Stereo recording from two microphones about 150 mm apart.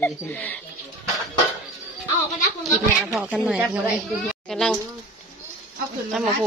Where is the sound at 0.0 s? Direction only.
10° left (ahead or behind).